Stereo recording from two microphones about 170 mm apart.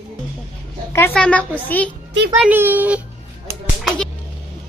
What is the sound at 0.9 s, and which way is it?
A woman's voice, 10° left (ahead or behind).